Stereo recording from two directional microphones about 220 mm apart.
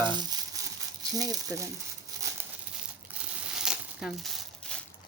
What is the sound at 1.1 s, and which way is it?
Speech, 15° right (ahead or behind).